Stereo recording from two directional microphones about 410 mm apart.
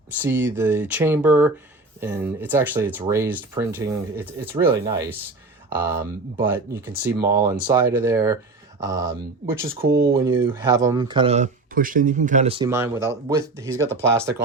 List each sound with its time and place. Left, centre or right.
0.2 s speech: centre